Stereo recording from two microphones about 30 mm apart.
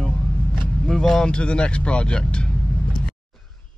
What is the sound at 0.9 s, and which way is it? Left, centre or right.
Speech, centre.